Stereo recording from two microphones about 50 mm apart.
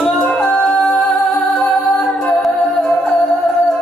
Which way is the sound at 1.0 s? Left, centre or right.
Centre.